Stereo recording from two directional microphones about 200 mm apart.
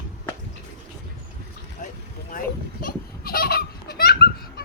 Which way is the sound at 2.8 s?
45° left (ahead or behind).